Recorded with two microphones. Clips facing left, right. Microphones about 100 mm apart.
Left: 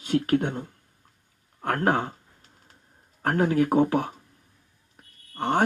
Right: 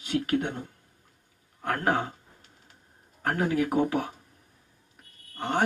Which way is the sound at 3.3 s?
45° left (ahead or behind).